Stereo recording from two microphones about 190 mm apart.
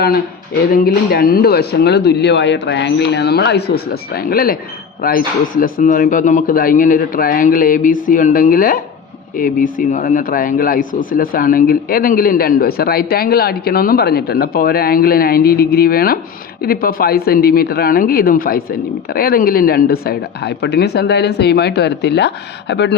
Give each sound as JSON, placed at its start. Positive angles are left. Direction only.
{"t": 0.7, "sound": "speech", "side_deg": 55}